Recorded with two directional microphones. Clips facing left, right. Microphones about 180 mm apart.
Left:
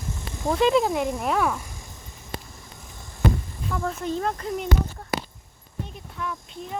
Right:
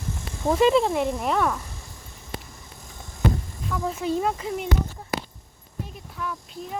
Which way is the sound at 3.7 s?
5° right (ahead or behind).